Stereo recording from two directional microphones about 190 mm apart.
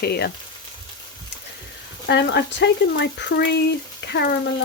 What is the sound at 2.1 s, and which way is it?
Frying, 65° left (ahead or behind).